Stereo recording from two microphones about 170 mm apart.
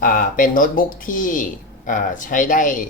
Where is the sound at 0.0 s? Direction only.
55° left (ahead or behind).